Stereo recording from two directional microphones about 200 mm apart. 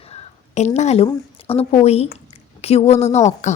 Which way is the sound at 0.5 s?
35° left (ahead or behind).